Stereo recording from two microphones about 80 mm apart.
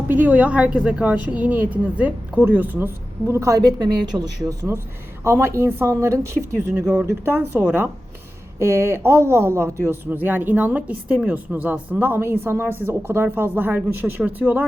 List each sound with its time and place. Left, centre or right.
0.1 s a woman's voice: right
3.2 s speech: right
3.6 s a woman's voice: right